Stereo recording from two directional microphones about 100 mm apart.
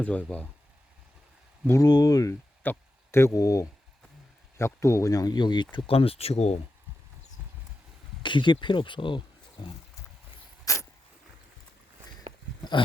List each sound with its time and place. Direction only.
0.0 s speech: 15° left (ahead or behind)
1.8 s speech: 40° left (ahead or behind)
2.6 s speech: 25° left (ahead or behind); by 5.6 s 50° left (ahead or behind)
5.9 s speech: 70° left (ahead or behind); by 6.6 s 90° left
8.2 s speech: 50° left (ahead or behind)
10.7 s a sound: 35° left (ahead or behind)